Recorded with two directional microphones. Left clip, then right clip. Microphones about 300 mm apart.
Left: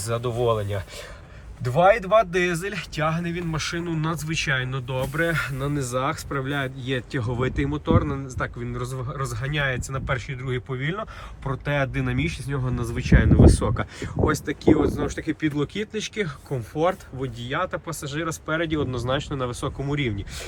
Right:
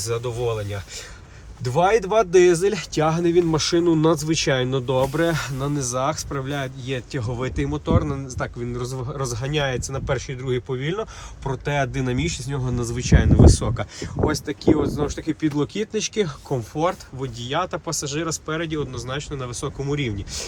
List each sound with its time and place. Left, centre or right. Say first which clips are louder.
0.0 s speech: right 1 dB; centre
1.6 s speech: even; centre